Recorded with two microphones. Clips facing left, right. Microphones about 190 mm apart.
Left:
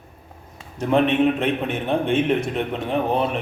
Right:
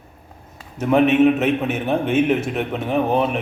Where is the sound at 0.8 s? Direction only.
5° right (ahead or behind).